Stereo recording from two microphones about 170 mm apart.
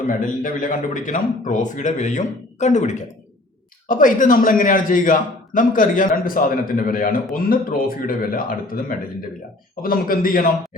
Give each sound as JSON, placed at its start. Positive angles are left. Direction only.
{"t": 0.1, "sound": "a man's voice", "side_deg": 50}